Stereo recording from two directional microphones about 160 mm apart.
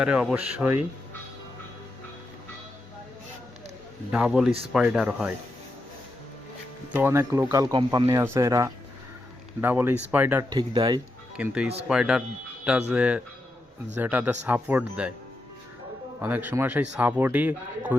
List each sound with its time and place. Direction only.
0.0 s speech: 5° right (ahead or behind)
4.1 s speech: 5° right (ahead or behind)
6.9 s speech: 15° right (ahead or behind)
10.5 s speech: 30° right (ahead or behind)
11.3 s speech: 5° right (ahead or behind)
16.2 s speech: 10° right (ahead or behind)